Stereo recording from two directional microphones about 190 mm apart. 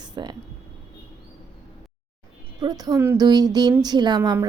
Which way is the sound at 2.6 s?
20° right (ahead or behind).